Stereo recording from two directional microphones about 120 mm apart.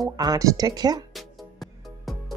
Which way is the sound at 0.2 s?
30° right (ahead or behind).